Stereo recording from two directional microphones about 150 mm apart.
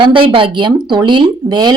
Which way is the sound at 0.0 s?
35° right (ahead or behind).